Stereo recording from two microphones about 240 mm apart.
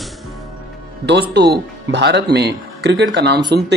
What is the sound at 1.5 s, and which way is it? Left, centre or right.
Speech, right.